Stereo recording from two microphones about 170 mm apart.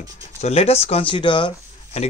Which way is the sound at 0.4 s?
35° left (ahead or behind).